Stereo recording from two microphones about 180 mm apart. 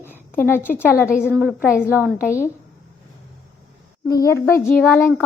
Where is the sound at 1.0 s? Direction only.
5° right (ahead or behind).